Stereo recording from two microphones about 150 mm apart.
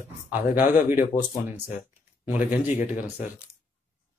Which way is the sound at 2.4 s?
60° left (ahead or behind).